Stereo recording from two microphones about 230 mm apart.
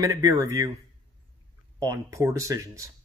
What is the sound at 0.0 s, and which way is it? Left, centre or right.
Speech, centre.